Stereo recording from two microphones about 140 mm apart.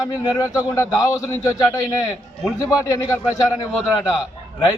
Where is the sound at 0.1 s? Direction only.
25° left (ahead or behind).